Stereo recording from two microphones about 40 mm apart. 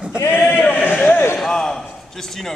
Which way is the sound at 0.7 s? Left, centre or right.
Left.